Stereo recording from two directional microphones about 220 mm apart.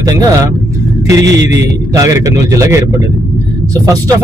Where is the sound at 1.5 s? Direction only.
15° right (ahead or behind).